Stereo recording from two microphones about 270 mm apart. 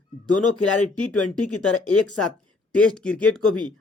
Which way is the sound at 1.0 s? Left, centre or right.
Left.